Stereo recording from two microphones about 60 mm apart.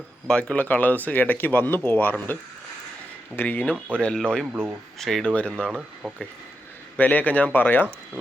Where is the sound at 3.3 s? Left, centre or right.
Left.